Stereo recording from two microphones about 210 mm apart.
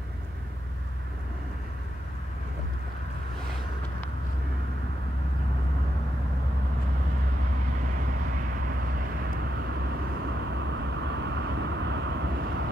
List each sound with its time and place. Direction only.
10.5 s vehicle: 60° right (ahead or behind)